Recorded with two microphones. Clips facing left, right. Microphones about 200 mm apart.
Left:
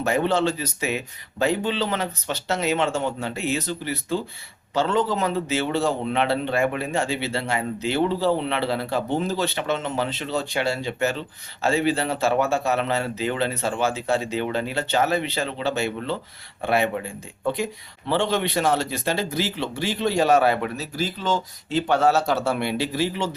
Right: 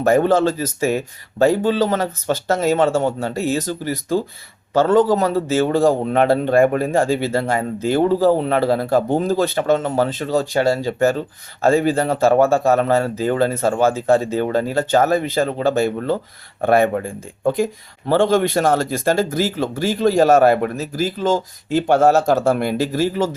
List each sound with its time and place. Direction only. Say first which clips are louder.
0.0 s a man's voice: right 7 dB; 45° right (ahead or behind)